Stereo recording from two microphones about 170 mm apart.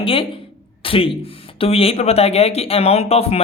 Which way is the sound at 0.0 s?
30° left (ahead or behind).